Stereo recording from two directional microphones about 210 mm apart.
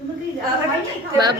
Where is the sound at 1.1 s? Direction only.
20° right (ahead or behind).